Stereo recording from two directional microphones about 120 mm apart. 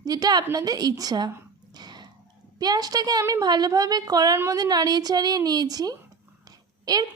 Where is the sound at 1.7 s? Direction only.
35° right (ahead or behind).